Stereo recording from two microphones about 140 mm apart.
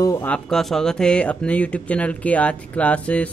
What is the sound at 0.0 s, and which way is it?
Speech, 20° left (ahead or behind).